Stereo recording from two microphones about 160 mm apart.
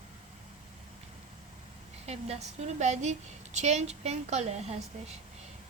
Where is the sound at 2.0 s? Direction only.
40° right (ahead or behind).